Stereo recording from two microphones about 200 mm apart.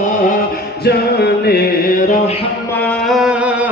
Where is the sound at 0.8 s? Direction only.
55° left (ahead or behind).